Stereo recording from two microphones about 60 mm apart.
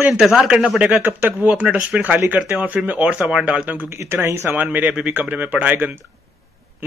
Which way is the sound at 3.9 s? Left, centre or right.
Right.